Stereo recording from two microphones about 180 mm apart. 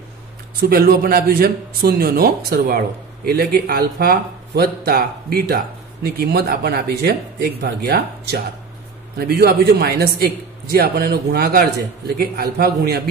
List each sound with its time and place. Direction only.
0.6 s speech: 55° right (ahead or behind)